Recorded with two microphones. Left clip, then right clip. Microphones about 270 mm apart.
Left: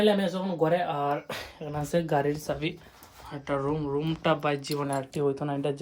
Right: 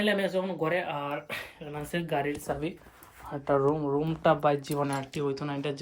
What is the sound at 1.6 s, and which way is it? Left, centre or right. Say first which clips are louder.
Speech: left 10 dB; centre.